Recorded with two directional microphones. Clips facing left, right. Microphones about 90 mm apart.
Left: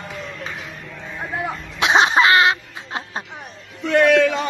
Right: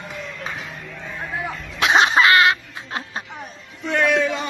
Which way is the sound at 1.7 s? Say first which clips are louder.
Left 1 dB; 20° left (ahead or behind).